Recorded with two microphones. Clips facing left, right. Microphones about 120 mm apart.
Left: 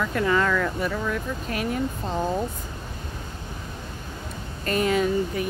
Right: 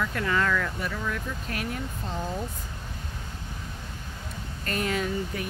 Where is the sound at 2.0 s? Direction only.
45° left (ahead or behind).